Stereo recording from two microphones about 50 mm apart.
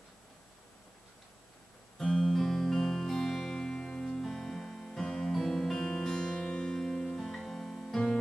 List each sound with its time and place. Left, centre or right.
2.0 s music: centre